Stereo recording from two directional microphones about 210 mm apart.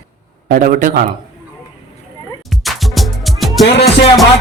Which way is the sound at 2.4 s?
Centre (ahead or behind).